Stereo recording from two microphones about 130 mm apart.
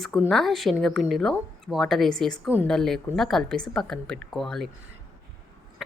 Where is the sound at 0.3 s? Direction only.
Centre (ahead or behind).